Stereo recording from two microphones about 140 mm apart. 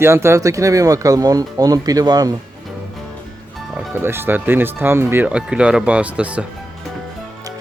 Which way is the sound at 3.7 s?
15° right (ahead or behind).